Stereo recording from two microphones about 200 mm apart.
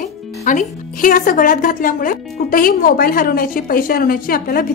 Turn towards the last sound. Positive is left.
turn(degrees=45)  # may be behind; listen again after turning